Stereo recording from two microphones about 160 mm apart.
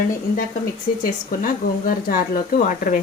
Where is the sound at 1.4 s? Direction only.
60° left (ahead or behind).